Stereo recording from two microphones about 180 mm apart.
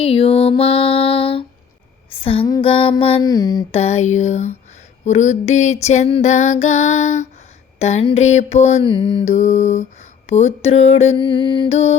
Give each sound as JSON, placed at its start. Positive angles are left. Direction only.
{"t": 0.0, "sound": "female singing", "side_deg": 30}
{"t": 2.5, "sound": "mantra", "side_deg": 30}
{"t": 3.7, "sound": "female singing", "side_deg": 35}
{"t": 8.8, "sound": "mantra", "side_deg": 25}
{"t": 9.3, "sound": "female singing", "side_deg": 40}